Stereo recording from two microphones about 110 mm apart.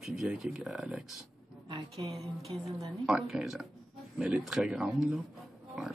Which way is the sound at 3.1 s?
5° right (ahead or behind).